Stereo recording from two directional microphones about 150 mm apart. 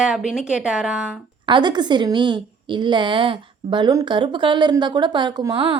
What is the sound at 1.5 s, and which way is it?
A woman's voice, 30° right (ahead or behind).